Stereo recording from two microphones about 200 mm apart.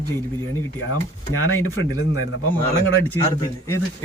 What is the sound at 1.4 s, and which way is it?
Speech, 90° left.